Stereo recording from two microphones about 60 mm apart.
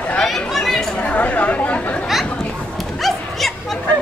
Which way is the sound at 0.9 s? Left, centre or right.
Left.